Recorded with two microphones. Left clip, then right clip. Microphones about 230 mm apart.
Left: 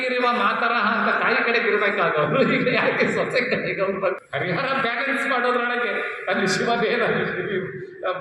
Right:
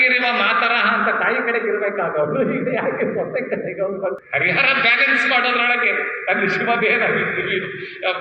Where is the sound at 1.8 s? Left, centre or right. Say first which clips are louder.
Even; left.